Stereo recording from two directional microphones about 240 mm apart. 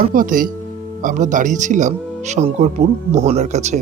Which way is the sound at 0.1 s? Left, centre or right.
Right.